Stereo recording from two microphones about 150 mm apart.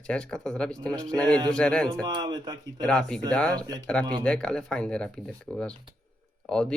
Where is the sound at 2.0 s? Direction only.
30° right (ahead or behind).